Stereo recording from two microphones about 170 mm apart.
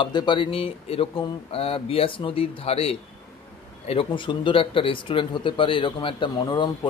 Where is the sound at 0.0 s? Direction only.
25° left (ahead or behind).